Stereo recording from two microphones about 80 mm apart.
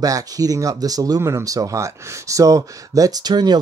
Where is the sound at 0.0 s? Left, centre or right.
Right.